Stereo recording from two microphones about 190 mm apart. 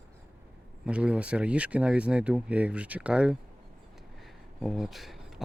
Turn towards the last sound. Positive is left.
turn(degrees=0)  # may be behind; listen again after turning